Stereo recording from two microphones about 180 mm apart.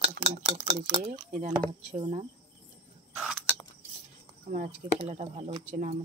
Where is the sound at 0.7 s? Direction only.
35° right (ahead or behind).